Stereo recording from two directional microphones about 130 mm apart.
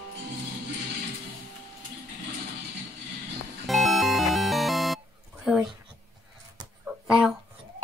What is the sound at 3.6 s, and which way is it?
Music, centre (ahead or behind).